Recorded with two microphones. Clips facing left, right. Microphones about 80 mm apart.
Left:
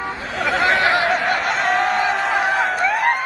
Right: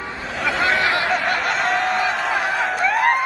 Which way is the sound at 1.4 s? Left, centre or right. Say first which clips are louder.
Left 2 dB; centre.